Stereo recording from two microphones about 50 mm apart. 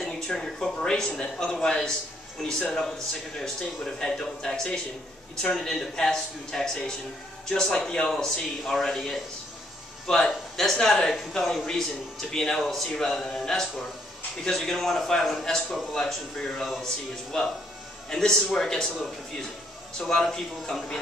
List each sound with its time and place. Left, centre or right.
0.0 s speech: centre
16.8 s speech: centre
20.0 s speech: centre